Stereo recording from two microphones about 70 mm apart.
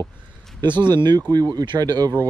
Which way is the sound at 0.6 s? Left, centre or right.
Right.